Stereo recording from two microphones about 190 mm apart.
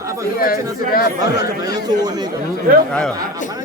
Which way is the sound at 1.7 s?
20° right (ahead or behind).